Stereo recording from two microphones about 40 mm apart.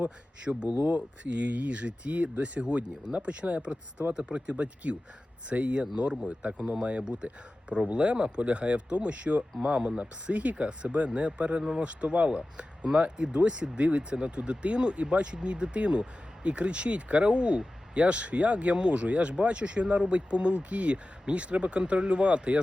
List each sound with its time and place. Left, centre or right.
0.4 s speech: right